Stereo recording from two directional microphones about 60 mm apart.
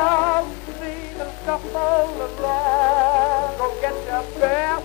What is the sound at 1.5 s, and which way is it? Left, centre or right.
Music, centre.